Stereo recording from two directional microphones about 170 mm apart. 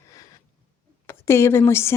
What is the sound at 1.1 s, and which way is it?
Speech, 15° left (ahead or behind).